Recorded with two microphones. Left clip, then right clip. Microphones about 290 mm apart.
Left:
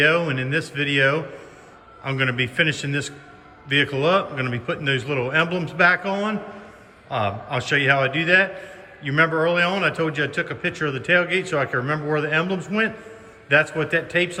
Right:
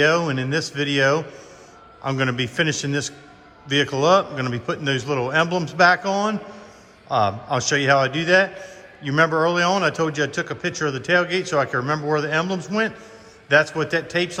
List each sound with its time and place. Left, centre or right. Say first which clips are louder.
0.0 s a man's voice: even; centre